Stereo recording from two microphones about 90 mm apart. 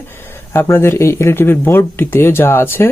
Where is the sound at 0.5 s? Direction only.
30° left (ahead or behind).